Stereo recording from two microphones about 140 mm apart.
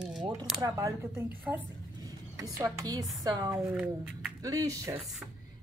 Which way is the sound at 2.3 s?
20° right (ahead or behind).